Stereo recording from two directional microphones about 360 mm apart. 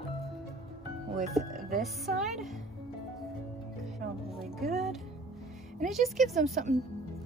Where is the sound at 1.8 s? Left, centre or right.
Centre.